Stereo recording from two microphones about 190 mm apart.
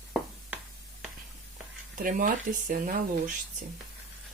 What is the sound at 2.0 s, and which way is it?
Speech, 45° right (ahead or behind).